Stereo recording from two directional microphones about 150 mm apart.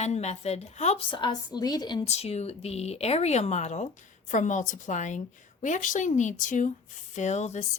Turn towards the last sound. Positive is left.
turn(degrees=50)  # may be behind; listen again after turning